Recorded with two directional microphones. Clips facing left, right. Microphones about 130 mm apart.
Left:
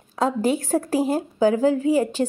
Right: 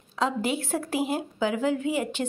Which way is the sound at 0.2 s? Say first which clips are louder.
Left 5 dB; 45° left (ahead or behind).